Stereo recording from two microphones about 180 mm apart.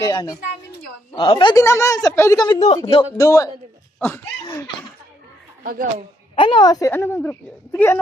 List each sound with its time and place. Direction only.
0.0 s speech: 20° left (ahead or behind)
1.5 s speech: 15° left (ahead or behind)
4.4 s laughter: 25° left (ahead or behind)
5.6 s a man's voice: 50° right (ahead or behind)
6.3 s speech: 25° left (ahead or behind)